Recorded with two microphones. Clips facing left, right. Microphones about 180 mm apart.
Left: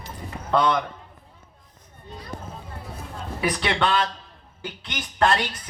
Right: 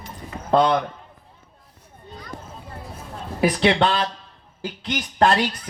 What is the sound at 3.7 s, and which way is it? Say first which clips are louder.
Speech: right 2 dB; 35° right (ahead or behind).